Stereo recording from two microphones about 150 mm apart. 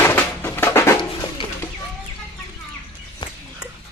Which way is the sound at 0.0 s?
15° left (ahead or behind).